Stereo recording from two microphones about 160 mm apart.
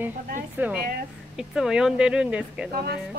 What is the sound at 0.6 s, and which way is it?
Speech, 10° right (ahead or behind).